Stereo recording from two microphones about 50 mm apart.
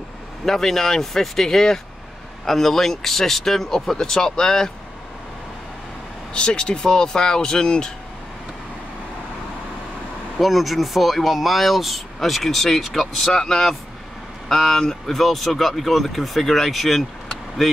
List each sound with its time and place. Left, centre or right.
0.5 s speech: centre
6.3 s speech: centre
10.4 s speech: centre